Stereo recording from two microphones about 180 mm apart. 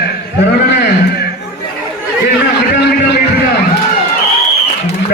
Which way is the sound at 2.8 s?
65° left (ahead or behind).